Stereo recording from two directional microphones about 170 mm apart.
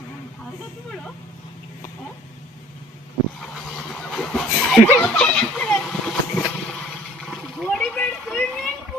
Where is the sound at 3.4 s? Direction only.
Centre (ahead or behind).